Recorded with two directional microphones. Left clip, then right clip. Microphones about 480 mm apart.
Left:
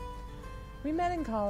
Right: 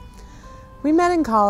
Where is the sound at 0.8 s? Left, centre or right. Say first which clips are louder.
Right 14 dB; right.